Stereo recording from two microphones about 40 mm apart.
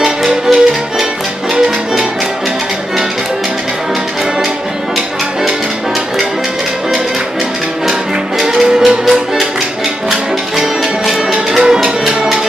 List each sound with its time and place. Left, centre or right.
0.2 s music: centre
8.4 s music: centre
10.5 s music: centre
11.6 s music: centre